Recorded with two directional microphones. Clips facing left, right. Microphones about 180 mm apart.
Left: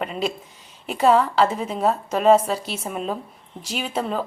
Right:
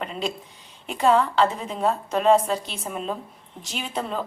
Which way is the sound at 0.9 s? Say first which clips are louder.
Left 2 dB; 10° left (ahead or behind).